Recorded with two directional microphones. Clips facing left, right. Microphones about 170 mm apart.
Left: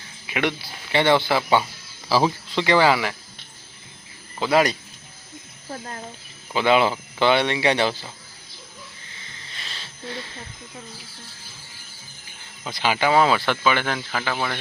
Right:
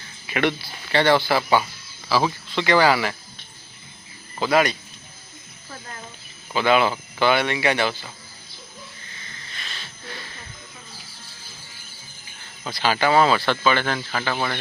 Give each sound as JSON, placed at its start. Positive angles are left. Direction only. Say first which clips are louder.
{"t": 0.3, "sound": "speech", "louder": "right 2 dB", "side_deg": 10}
{"t": 4.5, "sound": "speech", "louder": "left 1 dB", "side_deg": 35}
{"t": 6.5, "sound": "speech", "louder": "even", "side_deg": 25}
{"t": 9.6, "sound": "a sound", "louder": "left 2 dB", "side_deg": 30}
{"t": 12.6, "sound": "speech", "louder": "right 1 dB", "side_deg": 15}